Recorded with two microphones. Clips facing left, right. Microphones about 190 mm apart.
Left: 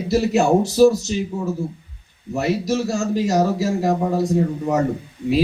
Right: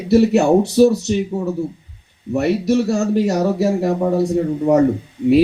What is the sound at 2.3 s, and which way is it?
Speech, 60° right (ahead or behind).